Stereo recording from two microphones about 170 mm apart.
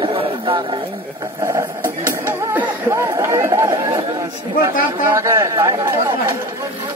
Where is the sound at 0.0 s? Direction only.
30° right (ahead or behind).